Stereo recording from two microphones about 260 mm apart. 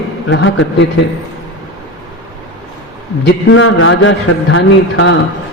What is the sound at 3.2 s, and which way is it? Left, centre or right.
A man's voice, left.